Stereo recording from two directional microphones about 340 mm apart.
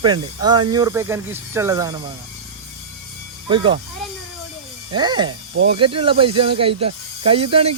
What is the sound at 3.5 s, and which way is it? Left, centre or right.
Speech, centre.